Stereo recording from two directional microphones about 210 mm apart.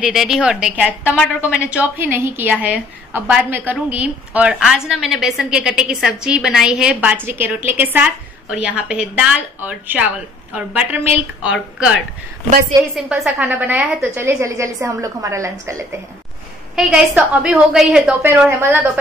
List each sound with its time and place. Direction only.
0.0 s a woman's voice: centre (ahead or behind)
12.4 s a woman's voice: 35° right (ahead or behind)
12.9 s a woman's voice: 5° right (ahead or behind)